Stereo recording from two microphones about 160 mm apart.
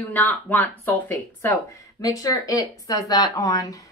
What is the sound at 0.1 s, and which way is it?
Speech, 10° left (ahead or behind).